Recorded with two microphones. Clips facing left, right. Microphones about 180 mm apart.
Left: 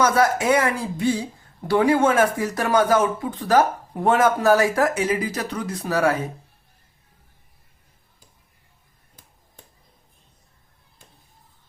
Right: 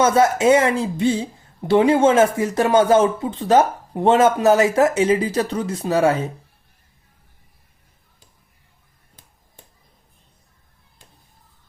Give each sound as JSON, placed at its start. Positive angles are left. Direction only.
{"t": 0.0, "sound": "speech", "side_deg": -25}